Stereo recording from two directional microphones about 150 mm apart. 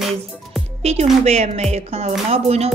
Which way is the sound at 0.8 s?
45° right (ahead or behind).